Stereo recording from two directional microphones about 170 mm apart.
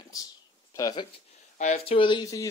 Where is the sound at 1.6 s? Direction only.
45° left (ahead or behind).